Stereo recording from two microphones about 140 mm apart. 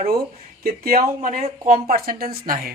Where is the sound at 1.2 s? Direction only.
70° right (ahead or behind); by 2.7 s 90° right.